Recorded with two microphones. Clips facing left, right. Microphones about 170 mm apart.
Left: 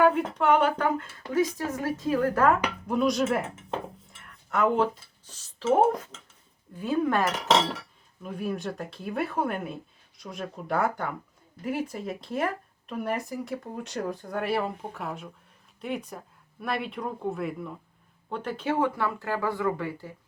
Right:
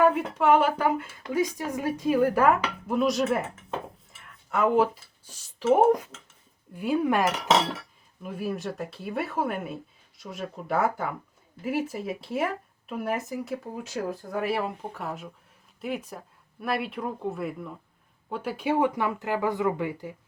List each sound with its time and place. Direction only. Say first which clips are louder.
0.0 s speech: even; 5° right (ahead or behind)